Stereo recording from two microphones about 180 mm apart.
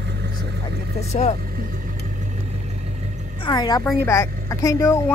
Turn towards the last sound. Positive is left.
turn(degrees=20)  # may be behind; listen again after turning